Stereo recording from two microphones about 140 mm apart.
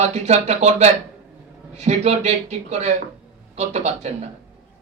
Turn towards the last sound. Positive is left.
turn(degrees=-50)  # may be behind; listen again after turning